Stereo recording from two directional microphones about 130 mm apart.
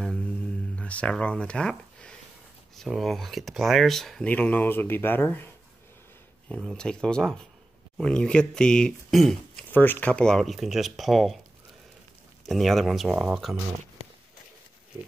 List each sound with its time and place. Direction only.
0.7 s speech: 10° left (ahead or behind)
4.3 s speech: 15° left (ahead or behind)
6.5 s speech: 5° left (ahead or behind)
9.7 s speech: 15° left (ahead or behind)
12.4 s speech: centre (ahead or behind)